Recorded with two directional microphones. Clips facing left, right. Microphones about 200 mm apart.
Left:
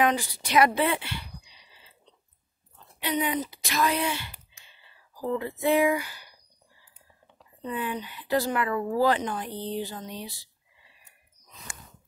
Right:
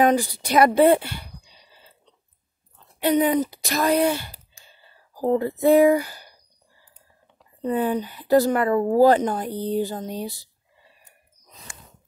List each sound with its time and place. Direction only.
0.0 s a woman's voice: 40° right (ahead or behind)
0.7 s a sound: 45° right (ahead or behind)
3.0 s speech: 45° right (ahead or behind)
7.6 s speech: 40° right (ahead or behind)